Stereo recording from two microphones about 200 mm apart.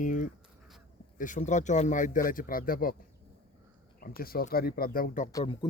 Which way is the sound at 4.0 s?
50° left (ahead or behind).